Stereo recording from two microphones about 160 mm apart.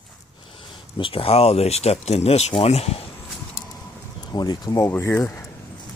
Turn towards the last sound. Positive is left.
turn(degrees=20)  # may be behind; listen again after turning